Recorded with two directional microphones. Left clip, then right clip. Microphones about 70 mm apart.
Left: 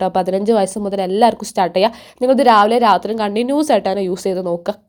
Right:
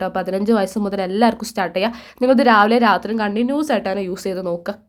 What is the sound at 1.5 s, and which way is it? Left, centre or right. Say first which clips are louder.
Speech: left 5 dB; left.